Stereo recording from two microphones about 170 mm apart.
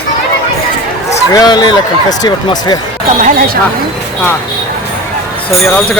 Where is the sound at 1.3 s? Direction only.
25° left (ahead or behind).